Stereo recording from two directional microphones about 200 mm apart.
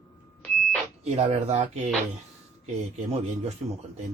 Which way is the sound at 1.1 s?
30° right (ahead or behind).